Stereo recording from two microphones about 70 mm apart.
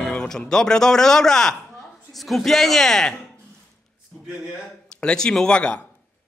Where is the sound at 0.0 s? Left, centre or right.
Centre.